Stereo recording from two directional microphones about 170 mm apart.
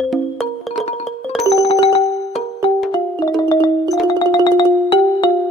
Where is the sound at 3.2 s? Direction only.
20° left (ahead or behind).